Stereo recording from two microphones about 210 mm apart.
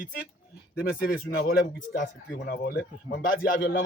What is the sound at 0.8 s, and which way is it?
Speech, 45° left (ahead or behind).